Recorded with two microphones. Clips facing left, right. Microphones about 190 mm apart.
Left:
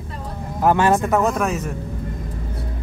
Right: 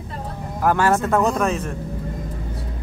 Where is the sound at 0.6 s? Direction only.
20° left (ahead or behind).